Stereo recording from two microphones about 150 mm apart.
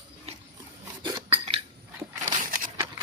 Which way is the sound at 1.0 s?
25° right (ahead or behind).